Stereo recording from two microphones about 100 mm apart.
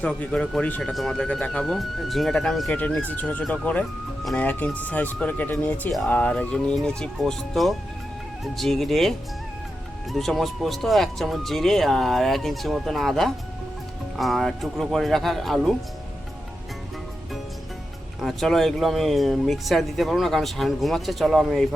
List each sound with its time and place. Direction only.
0.0 s speech: 10° left (ahead or behind)
3.2 s speech: 15° left (ahead or behind)
18.2 s speech: centre (ahead or behind)